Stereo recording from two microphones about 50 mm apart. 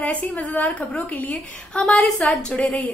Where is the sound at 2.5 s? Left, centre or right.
Left.